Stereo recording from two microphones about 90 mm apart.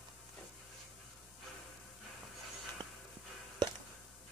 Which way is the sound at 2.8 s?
50° right (ahead or behind).